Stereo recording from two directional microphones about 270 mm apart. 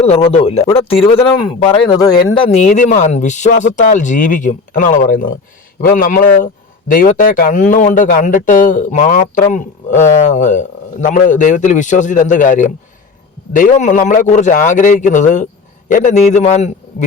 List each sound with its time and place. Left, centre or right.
0.0 s a man's voice: left